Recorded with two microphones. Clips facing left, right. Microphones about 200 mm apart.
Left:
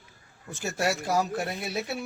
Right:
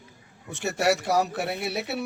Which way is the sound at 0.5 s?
70° right (ahead or behind).